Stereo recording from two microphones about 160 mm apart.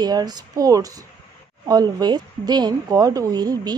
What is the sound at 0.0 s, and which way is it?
A woman's voice, 25° right (ahead or behind).